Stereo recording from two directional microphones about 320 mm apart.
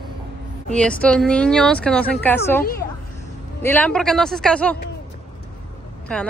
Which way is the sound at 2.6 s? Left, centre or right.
Left.